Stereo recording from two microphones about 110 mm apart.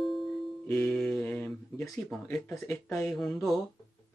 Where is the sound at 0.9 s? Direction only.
5° left (ahead or behind).